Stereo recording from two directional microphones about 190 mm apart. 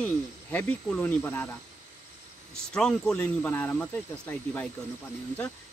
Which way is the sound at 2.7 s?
5° left (ahead or behind).